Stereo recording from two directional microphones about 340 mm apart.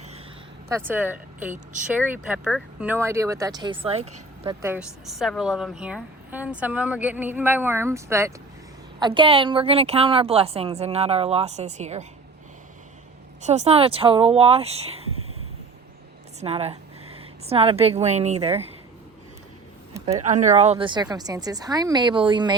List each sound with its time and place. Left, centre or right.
0.7 s speech: centre
4.6 s a woman's voice: centre
13.4 s speech: centre
16.4 s a woman's voice: centre
19.9 s speech: centre